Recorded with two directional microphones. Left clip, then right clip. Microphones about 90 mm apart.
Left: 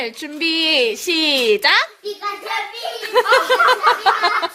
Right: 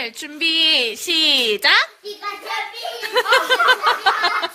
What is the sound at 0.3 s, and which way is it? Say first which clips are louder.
A woman's voice: even; 15° left (ahead or behind).